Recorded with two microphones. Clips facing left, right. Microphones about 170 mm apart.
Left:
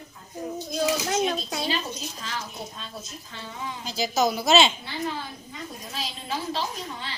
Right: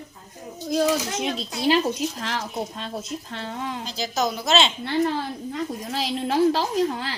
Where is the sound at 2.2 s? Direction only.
80° right.